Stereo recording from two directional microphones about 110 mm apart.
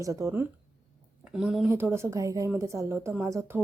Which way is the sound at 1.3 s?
5° right (ahead or behind).